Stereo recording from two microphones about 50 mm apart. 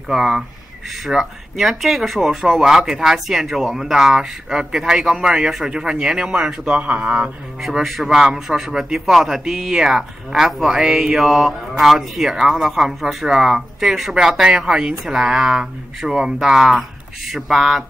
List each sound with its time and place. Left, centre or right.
0.1 s speech: centre
1.0 s speech: centre
6.7 s speech: right
7.8 s speech: centre